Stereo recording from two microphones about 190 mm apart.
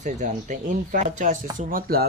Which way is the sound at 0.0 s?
40° right (ahead or behind).